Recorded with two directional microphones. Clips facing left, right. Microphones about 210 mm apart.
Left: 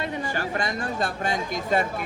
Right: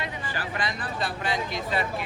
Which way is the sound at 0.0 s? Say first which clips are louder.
Left 5 dB; 45° left (ahead or behind).